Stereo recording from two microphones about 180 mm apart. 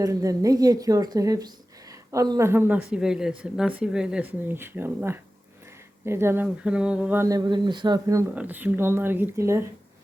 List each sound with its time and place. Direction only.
0.0 s a woman's voice: 20° right (ahead or behind)